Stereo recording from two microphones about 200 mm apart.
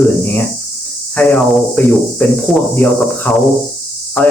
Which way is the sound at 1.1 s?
5° left (ahead or behind).